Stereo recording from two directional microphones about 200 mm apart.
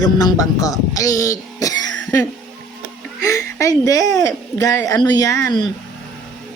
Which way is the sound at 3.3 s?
15° left (ahead or behind).